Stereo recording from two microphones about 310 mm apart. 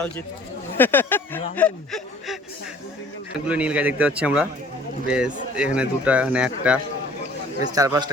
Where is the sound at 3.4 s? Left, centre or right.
Centre.